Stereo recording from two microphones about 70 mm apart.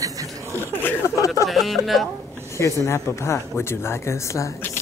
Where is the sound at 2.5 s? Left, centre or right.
Left.